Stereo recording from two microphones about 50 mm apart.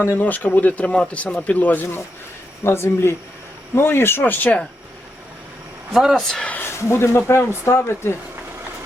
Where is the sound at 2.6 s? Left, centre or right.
Left.